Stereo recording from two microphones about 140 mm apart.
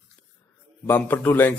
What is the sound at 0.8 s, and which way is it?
Speech, 15° left (ahead or behind).